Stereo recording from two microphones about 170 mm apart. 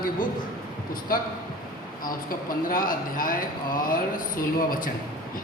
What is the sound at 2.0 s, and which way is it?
Speech, 55° left (ahead or behind).